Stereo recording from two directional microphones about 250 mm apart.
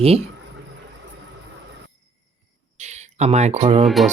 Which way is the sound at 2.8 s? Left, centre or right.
Right.